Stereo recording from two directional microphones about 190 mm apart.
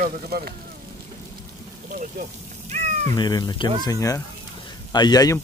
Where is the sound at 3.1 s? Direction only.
20° left (ahead or behind).